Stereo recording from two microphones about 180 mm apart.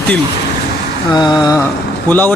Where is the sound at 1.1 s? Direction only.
25° left (ahead or behind).